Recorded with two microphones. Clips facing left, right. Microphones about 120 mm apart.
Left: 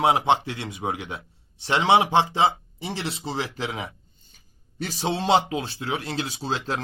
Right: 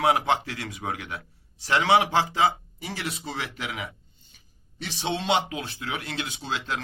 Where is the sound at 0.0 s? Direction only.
25° left (ahead or behind).